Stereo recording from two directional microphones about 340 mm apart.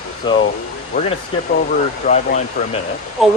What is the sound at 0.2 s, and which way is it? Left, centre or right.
Speech, centre.